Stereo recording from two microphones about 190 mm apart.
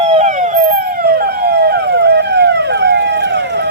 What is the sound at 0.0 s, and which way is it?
Emergency vehicle, 35° right (ahead or behind).